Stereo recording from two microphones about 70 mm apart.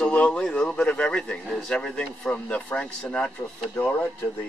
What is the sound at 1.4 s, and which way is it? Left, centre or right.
Speech, centre.